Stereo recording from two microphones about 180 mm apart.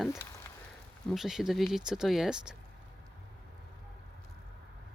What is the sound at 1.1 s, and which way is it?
Speech, centre (ahead or behind).